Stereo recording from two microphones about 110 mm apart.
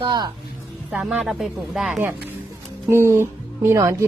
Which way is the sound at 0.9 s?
10° right (ahead or behind).